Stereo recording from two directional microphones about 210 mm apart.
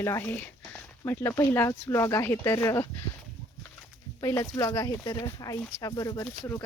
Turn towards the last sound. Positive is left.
turn(degrees=10)  # may be behind; listen again after turning